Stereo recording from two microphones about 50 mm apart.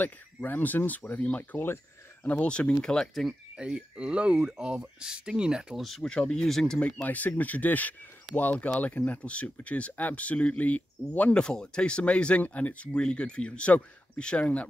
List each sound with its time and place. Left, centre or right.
0.0 s speech: left
1.4 s speech: left
2.4 s speech: left
3.5 s speech: centre
5.9 s speech: centre
7.1 s speech: left
11.3 s speech: centre